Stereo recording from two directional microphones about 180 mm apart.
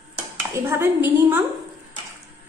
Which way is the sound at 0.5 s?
15° right (ahead or behind).